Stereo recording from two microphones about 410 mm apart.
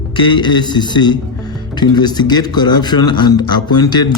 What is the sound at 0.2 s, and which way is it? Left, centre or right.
A man's voice, centre.